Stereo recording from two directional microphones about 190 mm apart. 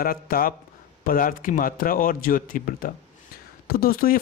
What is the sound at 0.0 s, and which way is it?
Speech, 50° left (ahead or behind).